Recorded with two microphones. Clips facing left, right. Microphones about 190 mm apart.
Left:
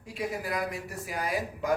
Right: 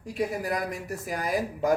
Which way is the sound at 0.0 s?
40° right (ahead or behind).